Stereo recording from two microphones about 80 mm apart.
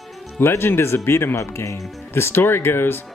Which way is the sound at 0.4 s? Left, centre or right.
Left.